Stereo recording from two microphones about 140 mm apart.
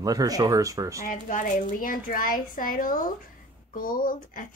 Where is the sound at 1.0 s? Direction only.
70° left (ahead or behind).